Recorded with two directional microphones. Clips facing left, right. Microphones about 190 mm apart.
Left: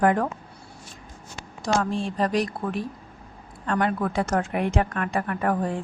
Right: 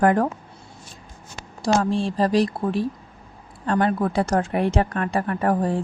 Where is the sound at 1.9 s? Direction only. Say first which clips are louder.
Right 4 dB; 30° right (ahead or behind).